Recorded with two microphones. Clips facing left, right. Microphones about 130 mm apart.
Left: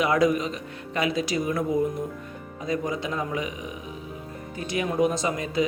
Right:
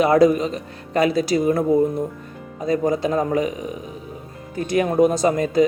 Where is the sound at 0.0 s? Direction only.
35° right (ahead or behind).